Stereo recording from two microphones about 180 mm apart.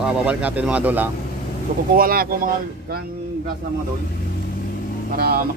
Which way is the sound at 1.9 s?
55° right (ahead or behind).